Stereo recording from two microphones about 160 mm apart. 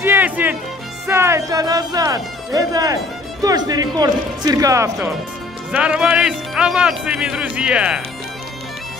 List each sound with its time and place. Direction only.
0.0 s music: 10° right (ahead or behind)
1.0 s speech: 15° right (ahead or behind)
5.7 s speech: 5° right (ahead or behind)